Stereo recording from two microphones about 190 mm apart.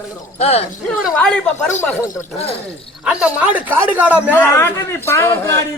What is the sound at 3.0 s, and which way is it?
Speech, 5° right (ahead or behind).